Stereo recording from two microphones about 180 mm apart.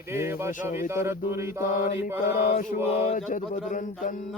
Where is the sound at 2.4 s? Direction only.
40° left (ahead or behind).